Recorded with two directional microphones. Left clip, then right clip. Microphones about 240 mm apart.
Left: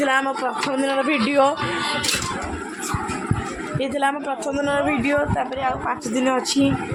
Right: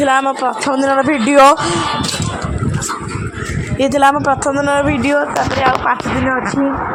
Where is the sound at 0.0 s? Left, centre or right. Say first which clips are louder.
Right 7 dB; centre.